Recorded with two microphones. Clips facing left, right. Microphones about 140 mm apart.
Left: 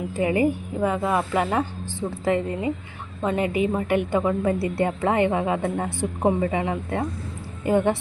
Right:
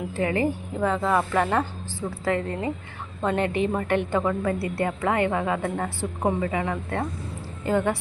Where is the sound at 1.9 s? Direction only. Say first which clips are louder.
Left 5 dB; 20° left (ahead or behind).